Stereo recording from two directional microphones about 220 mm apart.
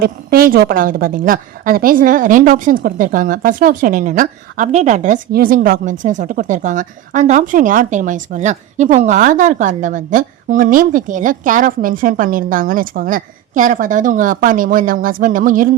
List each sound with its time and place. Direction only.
0.0 s a woman's voice: 40° right (ahead or behind)